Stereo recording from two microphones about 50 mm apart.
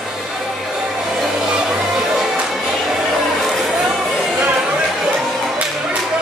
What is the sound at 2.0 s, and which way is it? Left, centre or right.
Music, centre.